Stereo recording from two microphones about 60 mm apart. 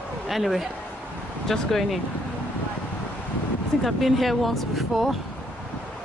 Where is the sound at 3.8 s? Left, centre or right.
Centre.